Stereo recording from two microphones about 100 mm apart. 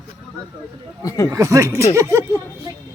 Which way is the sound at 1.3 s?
30° right (ahead or behind).